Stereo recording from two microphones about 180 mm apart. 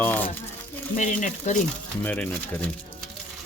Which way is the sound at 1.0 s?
40° left (ahead or behind).